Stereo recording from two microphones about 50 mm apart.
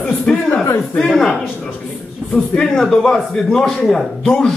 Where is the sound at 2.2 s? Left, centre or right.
Right.